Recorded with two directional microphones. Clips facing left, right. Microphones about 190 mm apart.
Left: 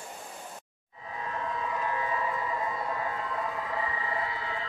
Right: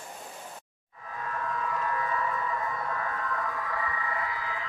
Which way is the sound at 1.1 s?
20° left (ahead or behind).